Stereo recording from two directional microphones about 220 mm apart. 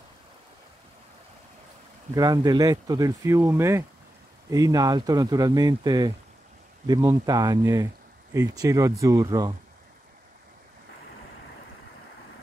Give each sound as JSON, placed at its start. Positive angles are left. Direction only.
{"t": 2.1, "sound": "speech", "side_deg": -15}